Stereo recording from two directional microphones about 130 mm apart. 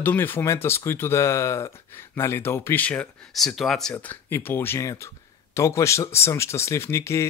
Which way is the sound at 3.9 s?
15° left (ahead or behind).